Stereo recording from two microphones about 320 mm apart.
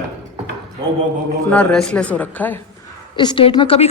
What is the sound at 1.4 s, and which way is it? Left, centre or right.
A man's voice, centre.